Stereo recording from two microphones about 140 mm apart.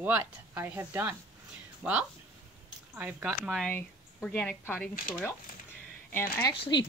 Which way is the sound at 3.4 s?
Centre (ahead or behind).